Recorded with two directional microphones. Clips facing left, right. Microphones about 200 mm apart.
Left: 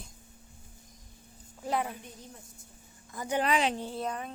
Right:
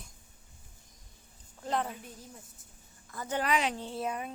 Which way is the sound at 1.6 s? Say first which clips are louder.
Left 1 dB; 10° left (ahead or behind).